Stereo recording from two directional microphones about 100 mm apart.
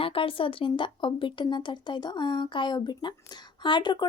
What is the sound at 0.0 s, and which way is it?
A woman's voice, 65° left (ahead or behind).